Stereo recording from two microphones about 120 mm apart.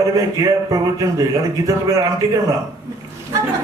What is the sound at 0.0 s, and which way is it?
A man's voice, 30° right (ahead or behind).